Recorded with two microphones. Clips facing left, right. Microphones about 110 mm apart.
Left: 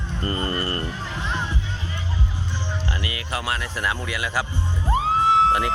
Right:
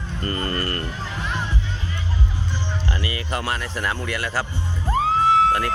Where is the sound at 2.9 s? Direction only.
5° left (ahead or behind).